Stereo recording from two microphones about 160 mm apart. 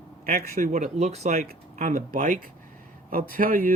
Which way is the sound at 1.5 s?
55° right (ahead or behind).